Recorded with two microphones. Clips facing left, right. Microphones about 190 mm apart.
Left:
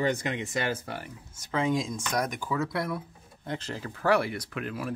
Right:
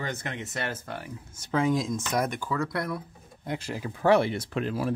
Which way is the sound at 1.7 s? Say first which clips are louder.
Right 2 dB; centre (ahead or behind).